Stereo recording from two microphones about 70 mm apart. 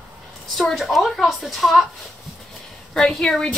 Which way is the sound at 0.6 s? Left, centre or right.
Centre.